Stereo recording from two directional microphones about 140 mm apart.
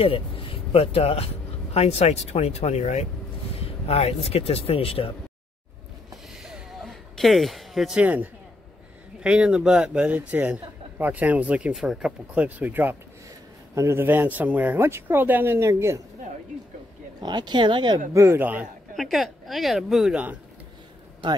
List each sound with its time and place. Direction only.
0.0 s speech: 40° left (ahead or behind)
6.3 s a sound: 5° right (ahead or behind)
9.2 s a man's voice: 5° right (ahead or behind)
17.2 s speech: 30° right (ahead or behind)
18.1 s a man's voice: 20° right (ahead or behind)
18.9 s speech: centre (ahead or behind)